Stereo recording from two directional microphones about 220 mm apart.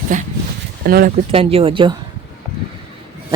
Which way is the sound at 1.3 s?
25° right (ahead or behind).